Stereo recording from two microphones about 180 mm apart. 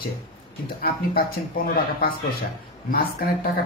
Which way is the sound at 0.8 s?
55° left (ahead or behind).